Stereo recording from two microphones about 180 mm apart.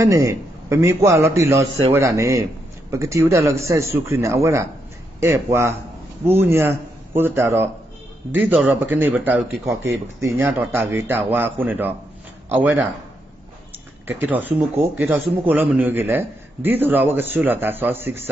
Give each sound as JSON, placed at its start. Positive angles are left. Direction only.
{"t": 0.0, "sound": "a man's voice", "side_deg": -15}
{"t": 14.0, "sound": "speech", "side_deg": -10}